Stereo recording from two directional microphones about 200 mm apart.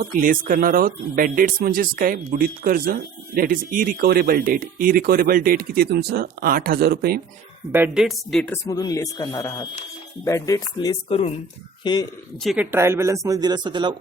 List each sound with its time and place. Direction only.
0.0 s speech: 45° right (ahead or behind)
7.7 s speech: 5° right (ahead or behind)
8.6 s speech: 20° left (ahead or behind)
12.4 s speech: centre (ahead or behind)
12.7 s a man's voice: 15° right (ahead or behind)